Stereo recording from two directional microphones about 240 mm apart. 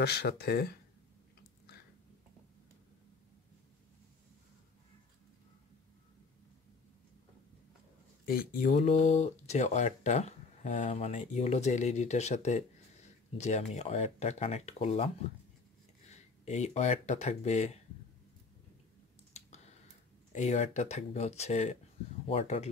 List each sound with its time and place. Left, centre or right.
0.0 s speech: left
8.3 s speech: left
16.1 s speech: left
19.3 s a sound: left
20.3 s speech: left